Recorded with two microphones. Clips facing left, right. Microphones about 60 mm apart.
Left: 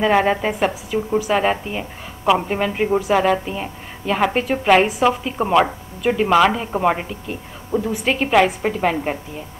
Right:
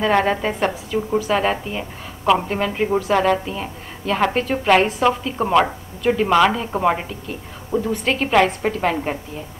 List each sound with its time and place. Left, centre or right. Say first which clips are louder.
0.0 s a woman's voice: left 1 dB; centre